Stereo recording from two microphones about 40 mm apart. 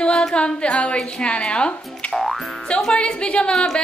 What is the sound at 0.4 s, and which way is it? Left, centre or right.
Speech, left.